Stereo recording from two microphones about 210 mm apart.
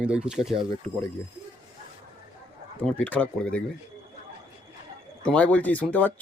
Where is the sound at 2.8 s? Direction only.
5° left (ahead or behind).